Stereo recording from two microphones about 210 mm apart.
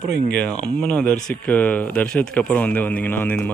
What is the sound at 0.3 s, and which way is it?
Speech, 5° left (ahead or behind).